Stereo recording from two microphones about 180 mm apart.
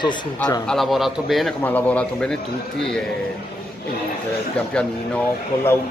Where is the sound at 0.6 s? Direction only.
Centre (ahead or behind).